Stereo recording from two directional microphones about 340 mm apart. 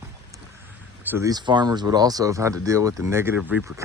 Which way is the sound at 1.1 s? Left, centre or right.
Centre.